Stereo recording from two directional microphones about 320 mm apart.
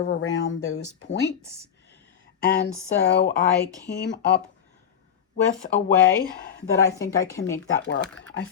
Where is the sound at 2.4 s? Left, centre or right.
Left.